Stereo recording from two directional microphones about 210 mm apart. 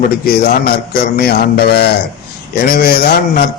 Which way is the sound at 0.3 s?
45° left (ahead or behind).